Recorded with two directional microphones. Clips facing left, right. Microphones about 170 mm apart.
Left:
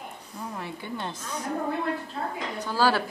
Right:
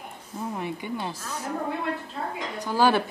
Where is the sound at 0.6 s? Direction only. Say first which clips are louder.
Right 2 dB; 15° right (ahead or behind).